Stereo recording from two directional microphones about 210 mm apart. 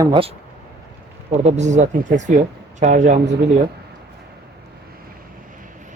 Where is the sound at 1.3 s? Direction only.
30° right (ahead or behind).